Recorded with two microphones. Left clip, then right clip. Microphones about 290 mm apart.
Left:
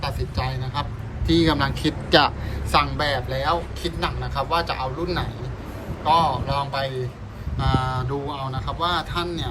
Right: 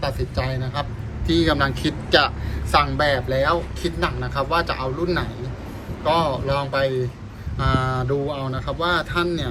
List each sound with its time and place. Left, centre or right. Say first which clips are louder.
0.0 s a man's voice: right 3 dB; centre